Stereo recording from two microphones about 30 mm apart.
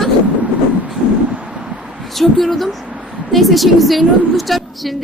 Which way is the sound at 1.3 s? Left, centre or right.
Right.